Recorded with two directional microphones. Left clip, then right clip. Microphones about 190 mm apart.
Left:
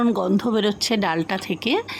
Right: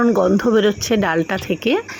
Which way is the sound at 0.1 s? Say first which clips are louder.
Right 7 dB; 5° right (ahead or behind).